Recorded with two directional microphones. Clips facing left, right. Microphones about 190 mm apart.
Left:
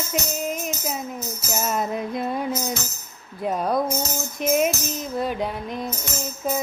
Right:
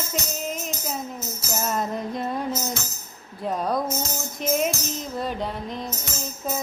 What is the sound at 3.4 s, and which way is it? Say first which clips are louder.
Speech: left 2 dB; 5° left (ahead or behind).